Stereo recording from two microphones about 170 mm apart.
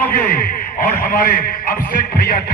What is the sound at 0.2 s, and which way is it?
A man's voice, 50° left (ahead or behind).